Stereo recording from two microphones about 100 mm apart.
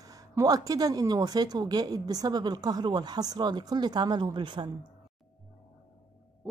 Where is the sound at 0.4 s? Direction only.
40° right (ahead or behind).